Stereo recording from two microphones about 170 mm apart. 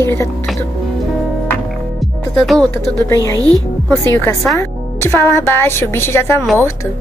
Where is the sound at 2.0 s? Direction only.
Centre (ahead or behind).